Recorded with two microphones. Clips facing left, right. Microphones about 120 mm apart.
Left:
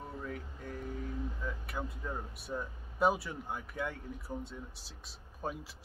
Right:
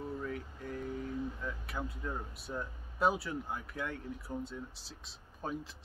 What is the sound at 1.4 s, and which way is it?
Speech, centre (ahead or behind).